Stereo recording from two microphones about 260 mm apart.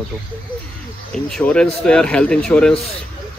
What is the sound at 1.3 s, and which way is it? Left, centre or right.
Speech, centre.